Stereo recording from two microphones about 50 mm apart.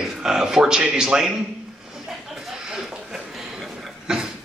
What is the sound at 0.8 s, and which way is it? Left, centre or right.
Speech, centre.